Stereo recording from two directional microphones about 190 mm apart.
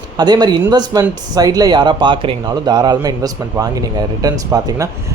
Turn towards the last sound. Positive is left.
turn(degrees=-20)  # may be behind; listen again after turning